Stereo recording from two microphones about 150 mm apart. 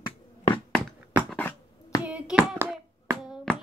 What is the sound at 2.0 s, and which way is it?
Hands, 10° right (ahead or behind).